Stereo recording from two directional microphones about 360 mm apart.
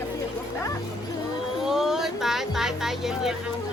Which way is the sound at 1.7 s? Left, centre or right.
Centre.